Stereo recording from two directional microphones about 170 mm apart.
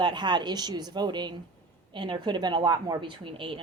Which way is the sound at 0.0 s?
25° right (ahead or behind).